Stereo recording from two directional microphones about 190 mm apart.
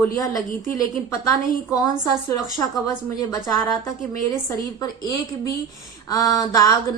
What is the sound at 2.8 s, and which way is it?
A woman's voice, 20° left (ahead or behind).